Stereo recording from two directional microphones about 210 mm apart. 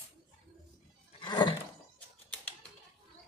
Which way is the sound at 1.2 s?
20° left (ahead or behind).